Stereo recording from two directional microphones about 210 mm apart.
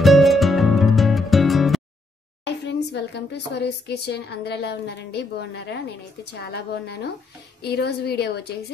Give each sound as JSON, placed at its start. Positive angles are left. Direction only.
{"t": 0.0, "sound": "music", "side_deg": 0}
{"t": 2.4, "sound": "a woman's voice", "side_deg": 55}